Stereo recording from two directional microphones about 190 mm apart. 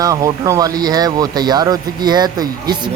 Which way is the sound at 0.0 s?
20° right (ahead or behind).